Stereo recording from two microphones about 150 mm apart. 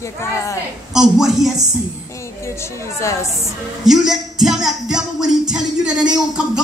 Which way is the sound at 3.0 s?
20° left (ahead or behind).